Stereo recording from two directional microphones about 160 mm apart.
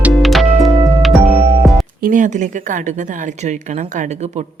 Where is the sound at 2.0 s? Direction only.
55° right (ahead or behind).